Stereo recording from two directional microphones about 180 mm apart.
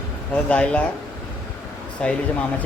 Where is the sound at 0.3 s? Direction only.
5° left (ahead or behind).